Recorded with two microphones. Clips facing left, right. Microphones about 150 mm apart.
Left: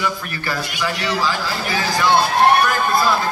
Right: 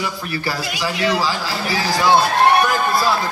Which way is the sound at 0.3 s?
30° right (ahead or behind).